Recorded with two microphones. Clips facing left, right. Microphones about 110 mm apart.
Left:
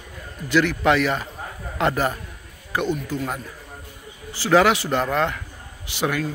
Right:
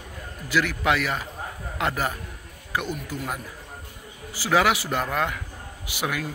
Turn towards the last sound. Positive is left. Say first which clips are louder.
# left 5 dB
turn(degrees=-5)  # may be behind; listen again after turning